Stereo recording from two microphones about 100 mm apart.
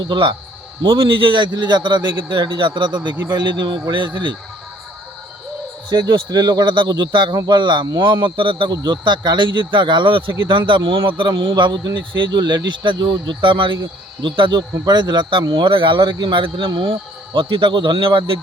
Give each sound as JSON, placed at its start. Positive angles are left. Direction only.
{"t": 0.1, "sound": "speech", "side_deg": -55}
{"t": 5.9, "sound": "speech", "side_deg": -45}